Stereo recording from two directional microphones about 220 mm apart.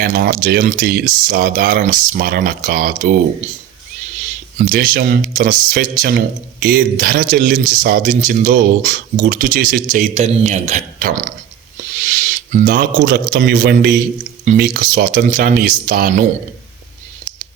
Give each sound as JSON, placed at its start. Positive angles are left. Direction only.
{"t": 0.0, "sound": "speech", "side_deg": -40}
{"t": 4.6, "sound": "a man's voice", "side_deg": -40}